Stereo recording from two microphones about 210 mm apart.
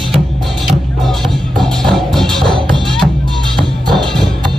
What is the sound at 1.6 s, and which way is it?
Music, centre (ahead or behind).